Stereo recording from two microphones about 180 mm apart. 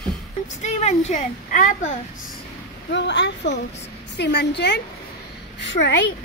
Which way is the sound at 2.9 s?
80° left.